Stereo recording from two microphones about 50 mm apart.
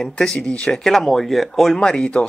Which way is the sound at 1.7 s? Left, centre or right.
Centre.